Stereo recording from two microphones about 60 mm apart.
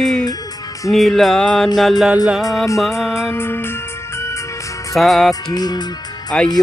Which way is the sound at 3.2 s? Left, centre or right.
Left.